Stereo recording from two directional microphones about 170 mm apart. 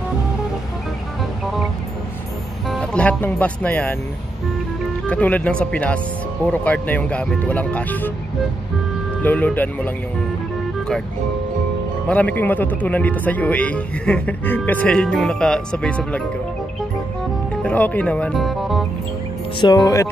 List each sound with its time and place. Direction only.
2.7 s speech: 5° left (ahead or behind)
5.0 s speech: 10° left (ahead or behind)
9.2 s speech: 10° left (ahead or behind)
12.1 s speech: 10° left (ahead or behind)
17.6 s speech: 10° left (ahead or behind)
19.6 s speech: 20° left (ahead or behind)